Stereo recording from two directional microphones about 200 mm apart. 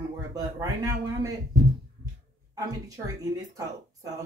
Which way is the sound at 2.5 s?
15° right (ahead or behind).